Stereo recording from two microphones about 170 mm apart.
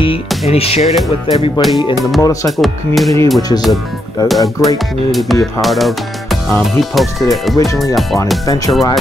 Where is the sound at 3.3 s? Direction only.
25° left (ahead or behind).